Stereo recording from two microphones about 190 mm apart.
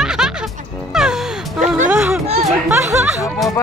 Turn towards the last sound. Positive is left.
turn(degrees=-15)  # may be behind; listen again after turning